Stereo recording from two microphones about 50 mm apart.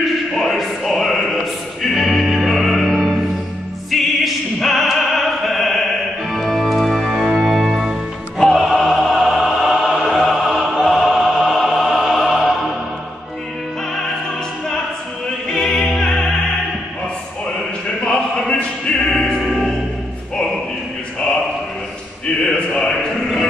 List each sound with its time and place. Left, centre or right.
0.3 s music: centre
3.9 s opera: centre
7.2 s music: centre
8.5 s opera: centre
15.5 s opera: centre
18.5 s music: left
22.2 s a sound: centre